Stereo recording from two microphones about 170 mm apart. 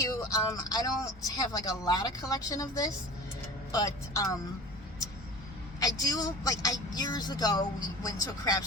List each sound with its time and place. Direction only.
0.0 s music: 20° left (ahead or behind)
1.3 s speech: 20° left (ahead or behind)
5.8 s speech: 20° left (ahead or behind)